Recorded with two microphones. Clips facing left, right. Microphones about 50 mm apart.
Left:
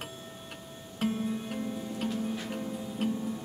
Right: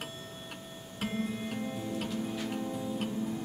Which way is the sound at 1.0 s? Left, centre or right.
Centre.